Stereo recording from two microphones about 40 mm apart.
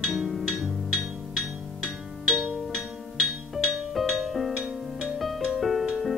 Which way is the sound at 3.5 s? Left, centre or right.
Centre.